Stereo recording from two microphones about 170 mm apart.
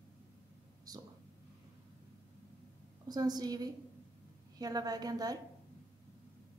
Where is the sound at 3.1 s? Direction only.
25° right (ahead or behind).